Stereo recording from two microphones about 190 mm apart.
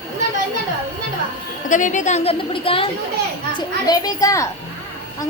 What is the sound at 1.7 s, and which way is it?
A child's voice, 40° left (ahead or behind).